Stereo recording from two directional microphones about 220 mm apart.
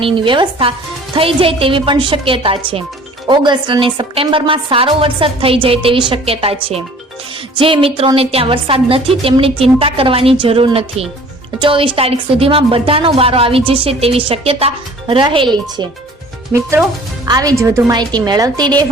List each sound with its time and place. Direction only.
0.0 s a woman's voice: 20° right (ahead or behind)